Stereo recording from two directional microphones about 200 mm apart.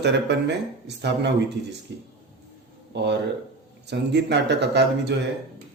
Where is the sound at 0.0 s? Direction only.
60° right (ahead or behind).